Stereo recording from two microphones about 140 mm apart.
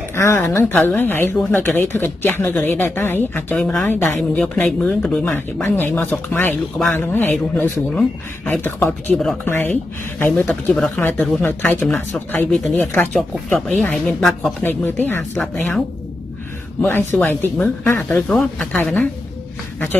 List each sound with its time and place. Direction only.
0.1 s speech: 20° left (ahead or behind); by 14.5 s centre (ahead or behind)
14.6 s speech: 15° left (ahead or behind)
15.3 s speech: centre (ahead or behind)
17.1 s speech: 15° left (ahead or behind)